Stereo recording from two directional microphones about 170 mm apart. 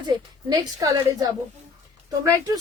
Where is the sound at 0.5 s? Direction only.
20° right (ahead or behind).